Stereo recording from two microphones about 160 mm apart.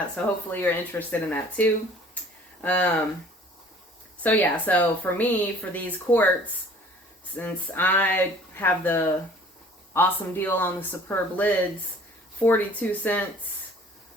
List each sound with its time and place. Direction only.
0.2 s a woman's voice: 10° left (ahead or behind)
4.2 s a woman's voice: 10° left (ahead or behind)